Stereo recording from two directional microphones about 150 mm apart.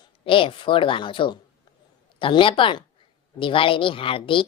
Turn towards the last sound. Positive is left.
turn(degrees=35)  # may be behind; listen again after turning